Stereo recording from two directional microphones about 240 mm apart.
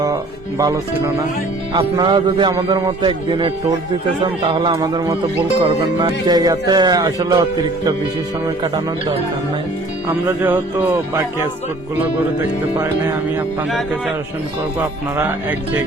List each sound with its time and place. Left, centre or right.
0.6 s a man's voice: centre
8.6 s a man's voice: centre
10.2 s speech: centre
14.8 s speech: centre